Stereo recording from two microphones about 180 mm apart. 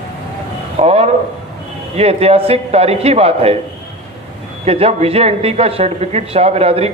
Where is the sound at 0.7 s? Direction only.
35° right (ahead or behind).